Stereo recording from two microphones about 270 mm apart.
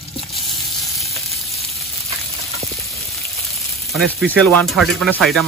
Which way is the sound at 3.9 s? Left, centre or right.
Centre.